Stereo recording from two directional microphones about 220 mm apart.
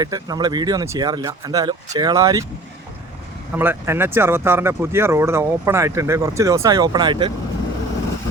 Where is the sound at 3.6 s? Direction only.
10° right (ahead or behind).